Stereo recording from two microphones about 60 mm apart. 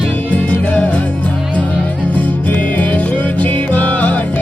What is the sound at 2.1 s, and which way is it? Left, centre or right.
Music, left.